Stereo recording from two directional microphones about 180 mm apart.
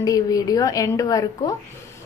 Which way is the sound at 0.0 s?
20° left (ahead or behind).